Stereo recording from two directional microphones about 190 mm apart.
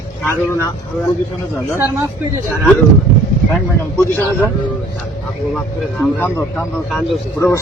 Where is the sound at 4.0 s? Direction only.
10° left (ahead or behind).